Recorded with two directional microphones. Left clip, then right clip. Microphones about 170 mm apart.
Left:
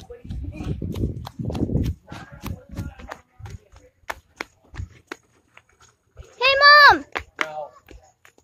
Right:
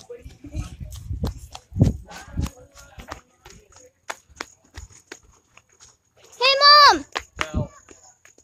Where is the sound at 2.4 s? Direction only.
60° left (ahead or behind).